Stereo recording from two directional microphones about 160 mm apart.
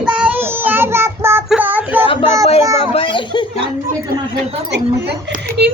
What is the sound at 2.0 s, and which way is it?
A child's voice, 35° left (ahead or behind).